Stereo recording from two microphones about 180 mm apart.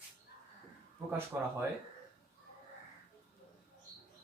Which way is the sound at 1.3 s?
10° right (ahead or behind).